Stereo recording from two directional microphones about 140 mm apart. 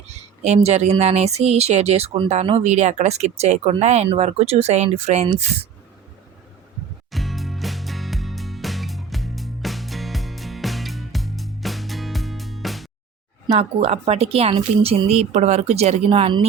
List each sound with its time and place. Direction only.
0.1 s speech: 55° right (ahead or behind)
7.1 s music: centre (ahead or behind)
13.5 s speech: 45° right (ahead or behind)